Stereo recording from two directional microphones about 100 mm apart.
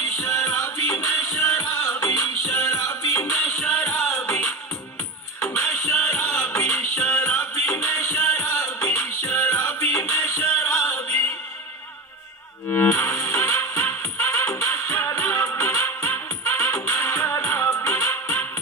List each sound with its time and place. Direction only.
0.3 s music: 35° left (ahead or behind)
3.3 s music: 10° left (ahead or behind)
10.4 s music: 10° left (ahead or behind)
12.6 s music: 25° left (ahead or behind)